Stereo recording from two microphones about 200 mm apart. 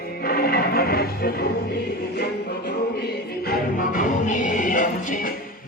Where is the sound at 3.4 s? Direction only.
45° left (ahead or behind).